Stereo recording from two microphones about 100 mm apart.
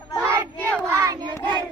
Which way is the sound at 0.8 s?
40° right (ahead or behind).